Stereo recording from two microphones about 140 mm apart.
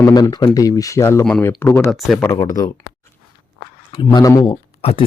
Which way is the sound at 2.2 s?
25° left (ahead or behind).